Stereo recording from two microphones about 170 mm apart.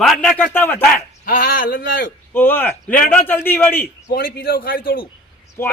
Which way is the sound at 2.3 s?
10° left (ahead or behind).